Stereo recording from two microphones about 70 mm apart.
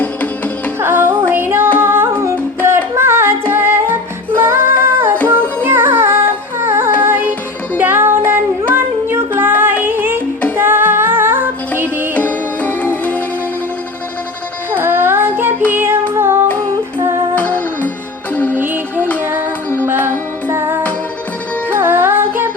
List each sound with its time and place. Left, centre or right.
0.0 s music: left
0.8 s music: right
1.3 s female singing: right
1.8 s music: right
12.1 s music: left
14.7 s child singing: right
15.7 s music: right
17.3 s music: left
18.5 s music: right